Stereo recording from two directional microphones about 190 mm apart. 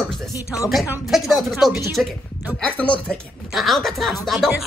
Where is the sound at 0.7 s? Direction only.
Centre (ahead or behind).